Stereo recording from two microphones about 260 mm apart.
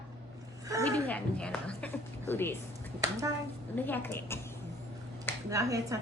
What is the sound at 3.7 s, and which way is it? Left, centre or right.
Speech, centre.